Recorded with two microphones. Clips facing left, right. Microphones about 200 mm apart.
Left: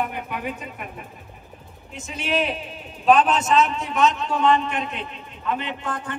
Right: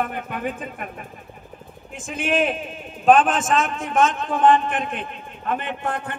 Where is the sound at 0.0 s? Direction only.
50° right (ahead or behind).